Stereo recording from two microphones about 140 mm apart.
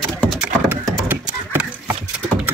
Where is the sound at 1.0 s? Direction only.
15° right (ahead or behind).